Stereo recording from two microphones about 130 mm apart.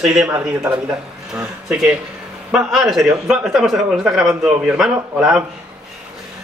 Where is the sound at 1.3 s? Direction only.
5° right (ahead or behind).